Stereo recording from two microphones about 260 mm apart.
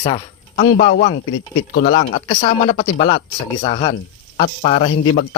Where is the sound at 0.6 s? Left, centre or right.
Left.